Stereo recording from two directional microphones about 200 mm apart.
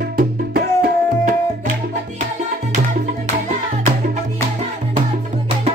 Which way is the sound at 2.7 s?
40° right (ahead or behind).